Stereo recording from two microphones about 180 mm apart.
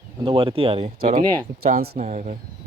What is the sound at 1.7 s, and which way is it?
Speech, 45° right (ahead or behind).